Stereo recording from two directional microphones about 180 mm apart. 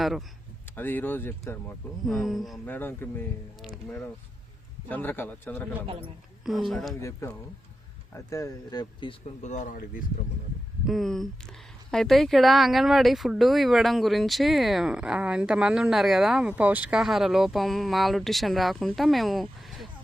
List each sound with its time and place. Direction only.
0.0 s a man's voice: centre (ahead or behind)
0.8 s speech: 10° left (ahead or behind)
2.0 s speech: centre (ahead or behind)
2.6 s speech: 10° left (ahead or behind)
4.9 s speech: 10° left (ahead or behind)
5.8 s a man's voice: 30° right (ahead or behind)
6.7 s speech: centre (ahead or behind)
7.0 s speech: 15° left (ahead or behind)
9.4 s speech: 40° left (ahead or behind)
10.8 s speech: centre (ahead or behind)